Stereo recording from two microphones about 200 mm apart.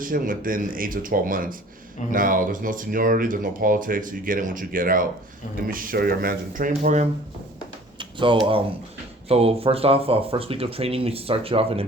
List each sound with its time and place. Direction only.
0.0 s speech: 45° right (ahead or behind)
7.9 s a sound: 25° right (ahead or behind)
9.3 s speech: 30° right (ahead or behind)